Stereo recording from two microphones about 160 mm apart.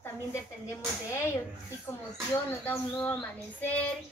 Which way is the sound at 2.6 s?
10° left (ahead or behind).